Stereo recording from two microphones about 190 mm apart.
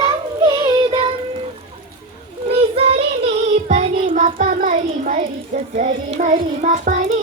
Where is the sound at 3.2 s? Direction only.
35° right (ahead or behind).